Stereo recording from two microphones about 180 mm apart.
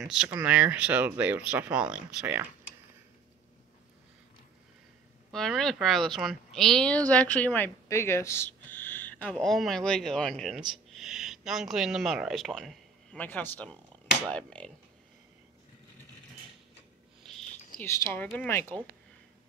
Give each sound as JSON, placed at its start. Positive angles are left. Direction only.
{"t": 0.0, "sound": "speech", "side_deg": -5}
{"t": 5.3, "sound": "a woman's voice", "side_deg": 0}
{"t": 17.2, "sound": "a sound", "side_deg": 0}
{"t": 17.8, "sound": "speech", "side_deg": 15}